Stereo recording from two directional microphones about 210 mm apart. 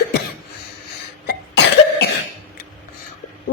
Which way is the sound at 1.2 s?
50° left (ahead or behind).